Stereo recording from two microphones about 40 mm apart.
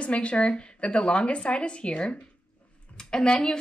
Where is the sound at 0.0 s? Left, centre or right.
Left.